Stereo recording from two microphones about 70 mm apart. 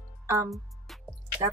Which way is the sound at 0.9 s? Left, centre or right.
Centre.